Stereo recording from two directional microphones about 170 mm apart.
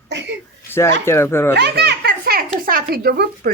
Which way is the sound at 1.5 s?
75° right (ahead or behind).